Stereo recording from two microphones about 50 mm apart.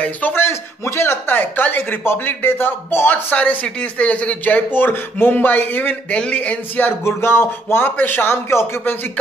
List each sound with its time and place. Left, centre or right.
0.4 s speech: left
3.3 s speech: left
4.7 s speech: left
7.1 s speech: left